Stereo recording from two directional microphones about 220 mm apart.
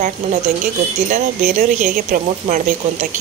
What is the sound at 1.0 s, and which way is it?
Speech, 35° right (ahead or behind).